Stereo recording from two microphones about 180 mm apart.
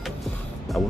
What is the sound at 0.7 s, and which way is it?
Speech, 5° left (ahead or behind).